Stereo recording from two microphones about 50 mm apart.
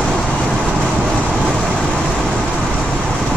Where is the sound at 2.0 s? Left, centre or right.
Centre.